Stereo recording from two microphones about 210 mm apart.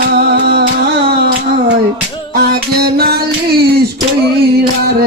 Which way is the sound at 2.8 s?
50° right (ahead or behind).